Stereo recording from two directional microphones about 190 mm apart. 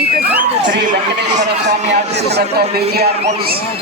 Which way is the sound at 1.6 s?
60° right (ahead or behind).